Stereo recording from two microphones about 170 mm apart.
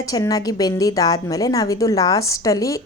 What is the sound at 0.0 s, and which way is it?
A woman's voice, 20° left (ahead or behind).